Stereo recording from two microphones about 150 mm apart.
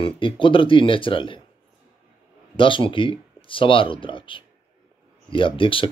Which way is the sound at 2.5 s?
35° left (ahead or behind).